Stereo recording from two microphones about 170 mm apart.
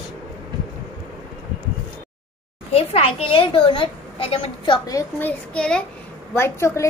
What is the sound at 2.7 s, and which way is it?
A child's voice, 35° left (ahead or behind).